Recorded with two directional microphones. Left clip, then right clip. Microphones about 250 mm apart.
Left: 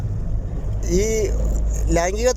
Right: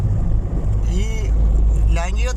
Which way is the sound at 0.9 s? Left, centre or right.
Centre.